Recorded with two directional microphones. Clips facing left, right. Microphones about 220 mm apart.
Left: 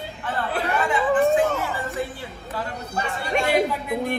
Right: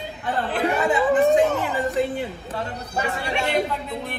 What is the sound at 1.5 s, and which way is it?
Music, 15° right (ahead or behind).